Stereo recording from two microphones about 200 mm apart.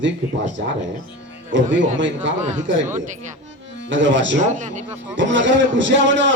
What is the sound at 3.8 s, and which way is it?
Speech, 65° right (ahead or behind).